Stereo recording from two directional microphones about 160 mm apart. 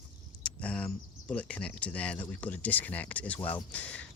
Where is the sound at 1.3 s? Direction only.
10° left (ahead or behind).